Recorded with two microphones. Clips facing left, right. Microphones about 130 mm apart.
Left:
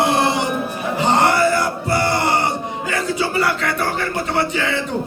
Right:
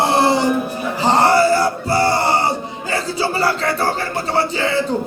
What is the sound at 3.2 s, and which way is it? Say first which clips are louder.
Speech: right 3 dB; 30° right (ahead or behind).